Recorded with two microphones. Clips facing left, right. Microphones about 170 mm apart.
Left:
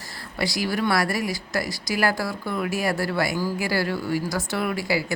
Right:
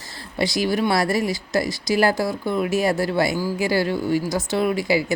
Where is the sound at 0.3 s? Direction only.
20° right (ahead or behind).